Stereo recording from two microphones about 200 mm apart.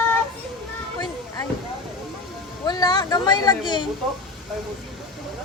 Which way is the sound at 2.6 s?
20° left (ahead or behind).